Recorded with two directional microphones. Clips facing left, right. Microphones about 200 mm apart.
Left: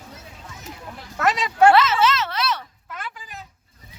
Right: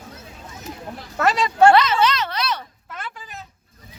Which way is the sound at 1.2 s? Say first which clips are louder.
Right 2 dB; 30° right (ahead or behind).